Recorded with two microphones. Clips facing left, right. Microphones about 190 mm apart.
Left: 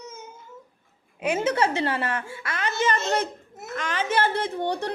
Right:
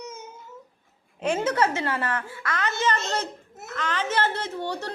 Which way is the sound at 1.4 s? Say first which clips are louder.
Left 3 dB; 25° left (ahead or behind).